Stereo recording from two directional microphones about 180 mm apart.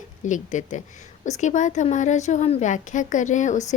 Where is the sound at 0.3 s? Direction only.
45° left (ahead or behind).